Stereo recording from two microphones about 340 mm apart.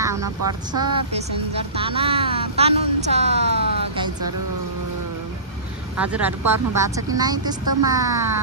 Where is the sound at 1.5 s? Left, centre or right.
Centre.